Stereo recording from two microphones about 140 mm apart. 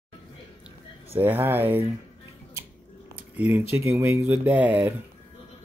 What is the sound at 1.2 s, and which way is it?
Speech, 15° right (ahead or behind).